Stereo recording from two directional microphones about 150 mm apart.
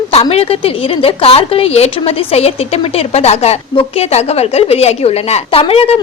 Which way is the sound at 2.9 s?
45° left (ahead or behind).